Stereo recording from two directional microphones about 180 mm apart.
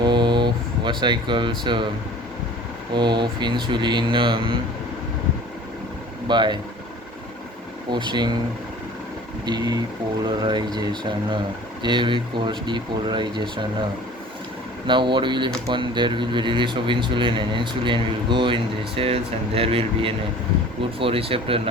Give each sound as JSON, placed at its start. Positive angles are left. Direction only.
{"t": 0.0, "sound": "air conditioning", "side_deg": -25}
{"t": 2.9, "sound": "speech", "side_deg": -25}
{"t": 6.2, "sound": "speech", "side_deg": -25}
{"t": 7.9, "sound": "speech", "side_deg": -25}
{"t": 9.5, "sound": "speech", "side_deg": -20}
{"t": 14.8, "sound": "speech", "side_deg": -25}